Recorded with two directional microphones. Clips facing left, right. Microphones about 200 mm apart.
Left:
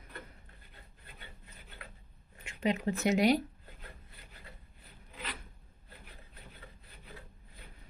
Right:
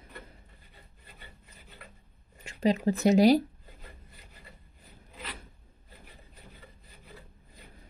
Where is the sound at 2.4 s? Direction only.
35° right (ahead or behind).